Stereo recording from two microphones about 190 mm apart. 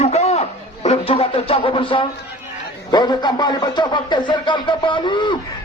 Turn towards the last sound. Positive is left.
turn(degrees=25)  # may be behind; listen again after turning